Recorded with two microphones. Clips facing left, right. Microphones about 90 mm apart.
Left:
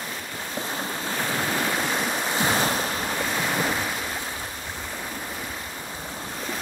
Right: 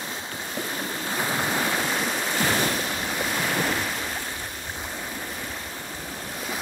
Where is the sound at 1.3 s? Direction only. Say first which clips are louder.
Even; 10° right (ahead or behind).